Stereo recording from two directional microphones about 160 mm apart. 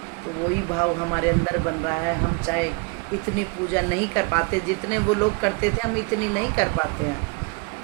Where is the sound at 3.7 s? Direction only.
15° left (ahead or behind).